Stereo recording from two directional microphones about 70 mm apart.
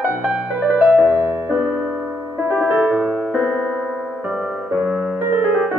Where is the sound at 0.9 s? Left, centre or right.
Centre.